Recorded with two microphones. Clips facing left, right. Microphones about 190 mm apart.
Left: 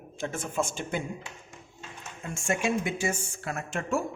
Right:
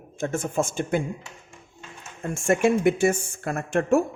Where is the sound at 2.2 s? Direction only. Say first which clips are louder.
Right 8 dB; 55° right (ahead or behind).